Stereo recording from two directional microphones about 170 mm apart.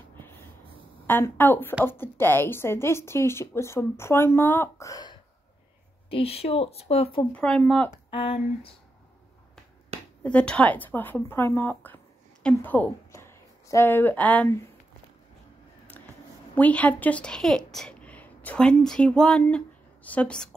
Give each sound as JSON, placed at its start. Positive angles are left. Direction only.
{"t": 0.1, "sound": "snort", "side_deg": 10}
{"t": 1.0, "sound": "a woman's voice", "side_deg": 10}
{"t": 6.0, "sound": "speech", "side_deg": 35}
{"t": 7.3, "sound": "speech", "side_deg": 5}
{"t": 8.1, "sound": "speech", "side_deg": 35}
{"t": 10.2, "sound": "a woman's voice", "side_deg": 5}
{"t": 16.5, "sound": "a woman's voice", "side_deg": 10}